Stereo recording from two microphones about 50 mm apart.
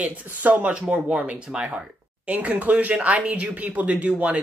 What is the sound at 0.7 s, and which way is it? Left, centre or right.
Speech, right.